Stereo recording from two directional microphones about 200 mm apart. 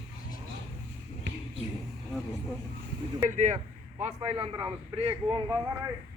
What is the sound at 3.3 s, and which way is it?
A man's voice, 35° right (ahead or behind).